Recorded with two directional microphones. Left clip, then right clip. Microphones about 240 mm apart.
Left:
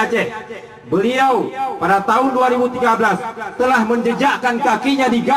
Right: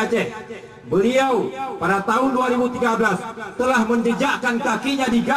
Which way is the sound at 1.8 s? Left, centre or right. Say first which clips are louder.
Left 4 dB; left.